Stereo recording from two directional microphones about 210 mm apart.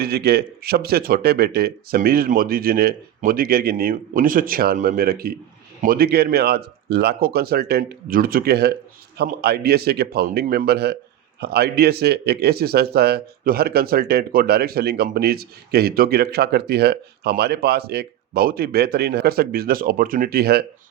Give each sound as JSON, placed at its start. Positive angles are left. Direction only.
{"t": 0.0, "sound": "speech", "side_deg": -50}